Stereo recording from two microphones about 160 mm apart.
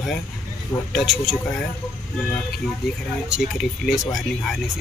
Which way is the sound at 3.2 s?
5° right (ahead or behind).